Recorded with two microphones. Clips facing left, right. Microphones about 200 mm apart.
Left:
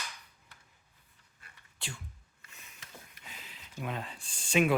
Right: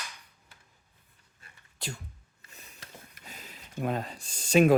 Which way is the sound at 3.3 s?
45° right (ahead or behind).